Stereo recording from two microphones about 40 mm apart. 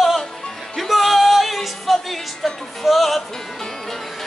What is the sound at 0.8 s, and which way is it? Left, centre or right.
Music, centre.